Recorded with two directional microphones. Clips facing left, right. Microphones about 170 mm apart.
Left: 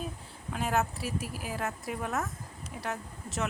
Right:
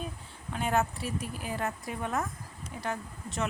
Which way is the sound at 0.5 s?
Centre (ahead or behind).